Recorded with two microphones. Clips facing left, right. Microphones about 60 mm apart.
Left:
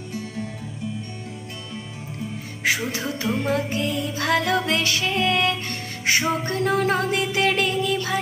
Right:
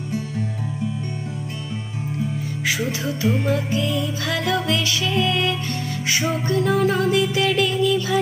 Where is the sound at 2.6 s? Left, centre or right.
Left.